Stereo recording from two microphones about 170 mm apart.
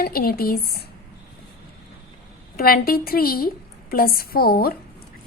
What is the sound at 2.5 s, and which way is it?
A woman's voice, 60° left (ahead or behind).